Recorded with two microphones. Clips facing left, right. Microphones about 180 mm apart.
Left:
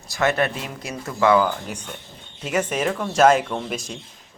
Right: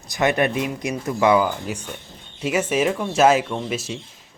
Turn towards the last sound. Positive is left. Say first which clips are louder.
# right 2 dB
turn(degrees=-5)  # may be behind; listen again after turning